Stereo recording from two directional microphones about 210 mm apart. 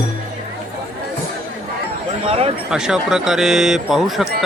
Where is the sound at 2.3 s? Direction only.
25° right (ahead or behind).